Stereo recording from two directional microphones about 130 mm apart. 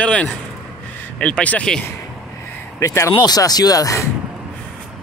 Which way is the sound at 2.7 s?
20° left (ahead or behind).